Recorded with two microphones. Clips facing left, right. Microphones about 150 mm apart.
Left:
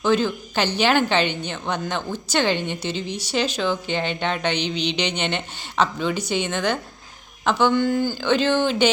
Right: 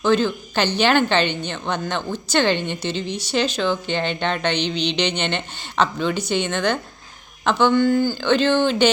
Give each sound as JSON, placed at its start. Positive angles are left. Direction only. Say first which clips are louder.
{"t": 0.0, "sound": "a woman's voice", "louder": "right 2 dB", "side_deg": 10}